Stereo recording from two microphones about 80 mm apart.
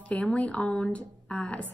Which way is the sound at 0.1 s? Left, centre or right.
Centre.